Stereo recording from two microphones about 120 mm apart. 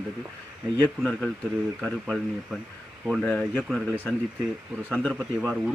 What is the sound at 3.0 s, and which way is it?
Speech, centre (ahead or behind).